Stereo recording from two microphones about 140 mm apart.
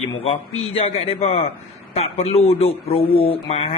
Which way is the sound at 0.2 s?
45° left (ahead or behind).